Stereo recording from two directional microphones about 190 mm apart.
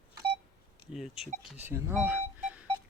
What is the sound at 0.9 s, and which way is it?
Speech, centre (ahead or behind).